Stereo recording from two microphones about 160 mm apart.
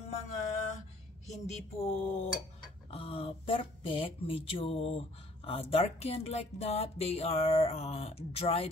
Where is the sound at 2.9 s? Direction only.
35° left (ahead or behind).